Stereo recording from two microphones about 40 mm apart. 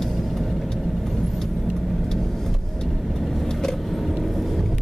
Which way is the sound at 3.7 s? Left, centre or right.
Centre.